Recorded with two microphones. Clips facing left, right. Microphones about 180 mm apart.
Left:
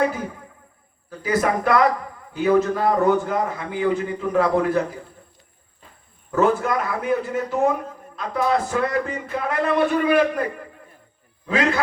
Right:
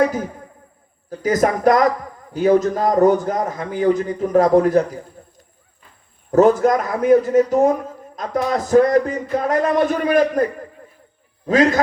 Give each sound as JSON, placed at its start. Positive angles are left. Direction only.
{"t": 1.2, "sound": "a man's voice", "side_deg": -40}
{"t": 6.3, "sound": "a man's voice", "side_deg": -40}
{"t": 11.4, "sound": "a man's voice", "side_deg": -40}